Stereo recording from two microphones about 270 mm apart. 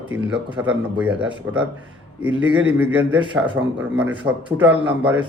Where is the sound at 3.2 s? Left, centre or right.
Centre.